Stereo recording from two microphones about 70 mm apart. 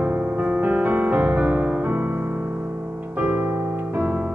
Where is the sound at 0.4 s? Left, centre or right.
Right.